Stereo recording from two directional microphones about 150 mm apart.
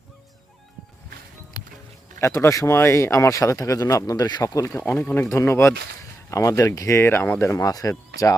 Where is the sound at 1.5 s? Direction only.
25° left (ahead or behind).